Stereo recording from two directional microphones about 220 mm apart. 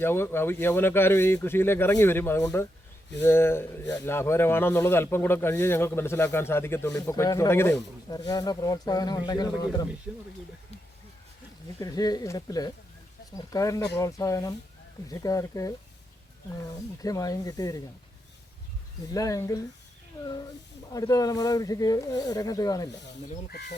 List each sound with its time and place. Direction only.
0.0 s speech: 10° left (ahead or behind)
11.8 s speech: 15° left (ahead or behind)
19.1 s speech: 15° left (ahead or behind)
20.9 s speech: 15° left (ahead or behind)
23.5 s speech: 50° left (ahead or behind)